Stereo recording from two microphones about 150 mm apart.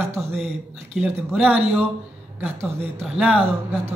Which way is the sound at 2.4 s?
15° right (ahead or behind).